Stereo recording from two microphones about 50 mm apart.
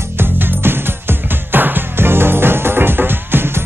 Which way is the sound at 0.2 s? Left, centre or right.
Right.